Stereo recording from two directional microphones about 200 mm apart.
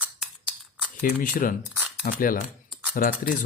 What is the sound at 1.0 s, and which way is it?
Speech, 45° left (ahead or behind).